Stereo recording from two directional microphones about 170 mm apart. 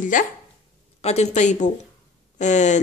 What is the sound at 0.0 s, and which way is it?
Speech, 50° left (ahead or behind).